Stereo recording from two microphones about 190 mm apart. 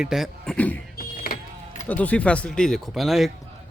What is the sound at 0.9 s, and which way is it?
Vehicle, 50° left (ahead or behind).